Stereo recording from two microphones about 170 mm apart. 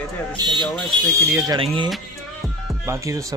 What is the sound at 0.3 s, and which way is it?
Speech, centre (ahead or behind).